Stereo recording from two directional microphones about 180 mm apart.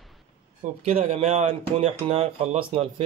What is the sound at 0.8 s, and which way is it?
Speech, 35° right (ahead or behind).